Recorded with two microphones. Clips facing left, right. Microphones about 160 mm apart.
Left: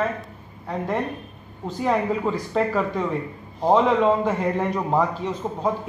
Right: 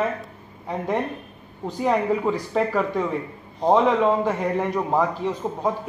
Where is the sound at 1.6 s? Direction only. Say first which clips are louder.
Right 1 dB; 15° right (ahead or behind).